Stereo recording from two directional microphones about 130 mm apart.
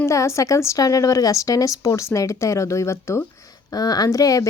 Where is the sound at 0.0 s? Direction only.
20° left (ahead or behind).